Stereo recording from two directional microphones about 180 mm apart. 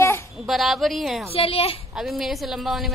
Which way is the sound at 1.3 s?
30° left (ahead or behind).